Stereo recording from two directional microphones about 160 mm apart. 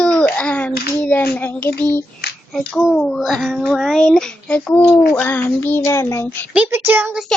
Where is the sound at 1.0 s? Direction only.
10° left (ahead or behind).